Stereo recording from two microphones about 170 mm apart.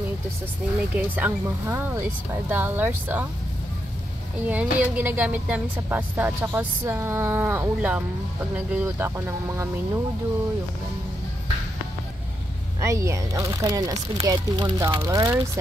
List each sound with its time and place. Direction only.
0.9 s speech: 10° right (ahead or behind)
4.5 s speech: 10° right (ahead or behind)
12.8 s speech: 15° right (ahead or behind)